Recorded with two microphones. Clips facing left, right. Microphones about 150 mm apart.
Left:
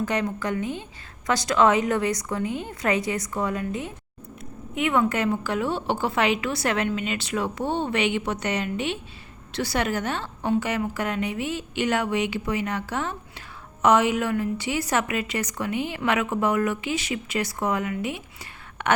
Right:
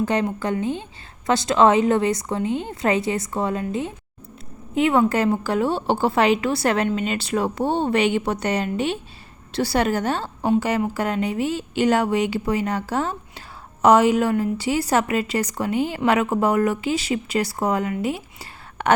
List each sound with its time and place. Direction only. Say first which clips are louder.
0.0 s a woman's voice: right 4 dB; 30° right (ahead or behind)